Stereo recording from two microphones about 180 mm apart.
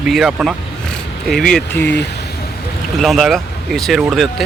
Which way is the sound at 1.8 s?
70° left (ahead or behind).